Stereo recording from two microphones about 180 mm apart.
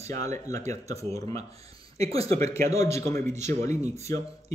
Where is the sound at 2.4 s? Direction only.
15° left (ahead or behind).